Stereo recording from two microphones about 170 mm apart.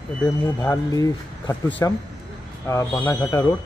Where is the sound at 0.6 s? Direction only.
20° left (ahead or behind).